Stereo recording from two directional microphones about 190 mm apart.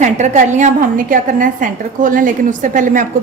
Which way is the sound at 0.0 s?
40° right (ahead or behind).